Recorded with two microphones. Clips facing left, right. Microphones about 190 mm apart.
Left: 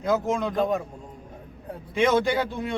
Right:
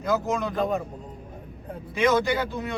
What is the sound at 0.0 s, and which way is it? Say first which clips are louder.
Speech: left 1 dB; 25° left (ahead or behind).